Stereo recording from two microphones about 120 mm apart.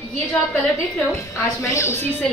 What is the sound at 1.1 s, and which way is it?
A woman's voice, 25° left (ahead or behind).